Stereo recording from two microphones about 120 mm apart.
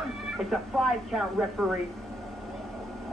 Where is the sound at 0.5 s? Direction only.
5° right (ahead or behind).